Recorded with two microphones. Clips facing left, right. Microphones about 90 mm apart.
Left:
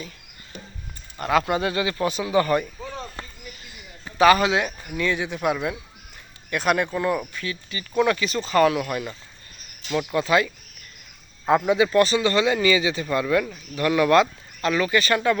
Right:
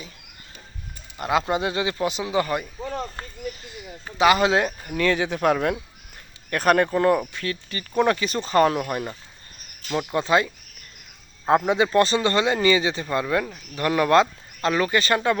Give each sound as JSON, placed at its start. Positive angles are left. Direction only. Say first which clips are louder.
{"t": 1.2, "sound": "speech", "louder": "left 1 dB", "side_deg": -20}
{"t": 4.2, "sound": "speech", "louder": "left 2 dB", "side_deg": -20}
{"t": 4.4, "sound": "speech", "louder": "right 2 dB", "side_deg": -35}
{"t": 4.9, "sound": "speech", "louder": "right 3 dB", "side_deg": -60}